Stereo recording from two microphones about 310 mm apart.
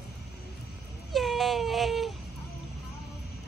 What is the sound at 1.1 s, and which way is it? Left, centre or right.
Baby cry, centre.